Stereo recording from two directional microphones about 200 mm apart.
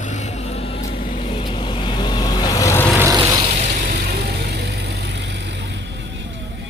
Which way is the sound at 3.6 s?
45° right (ahead or behind).